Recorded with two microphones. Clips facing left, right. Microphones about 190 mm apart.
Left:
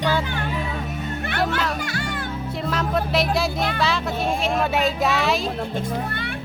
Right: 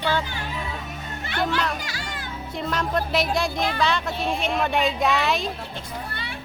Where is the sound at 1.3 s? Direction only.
55° left (ahead or behind).